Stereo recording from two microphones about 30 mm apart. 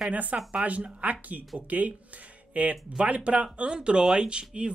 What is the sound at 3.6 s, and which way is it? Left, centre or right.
Speech, right.